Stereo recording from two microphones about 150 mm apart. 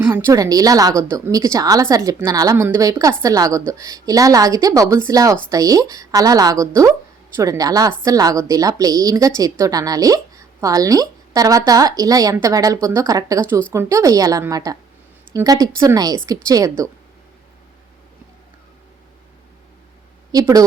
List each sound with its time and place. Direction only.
0.0 s a woman's voice: 15° right (ahead or behind)
20.3 s a woman's voice: 25° right (ahead or behind)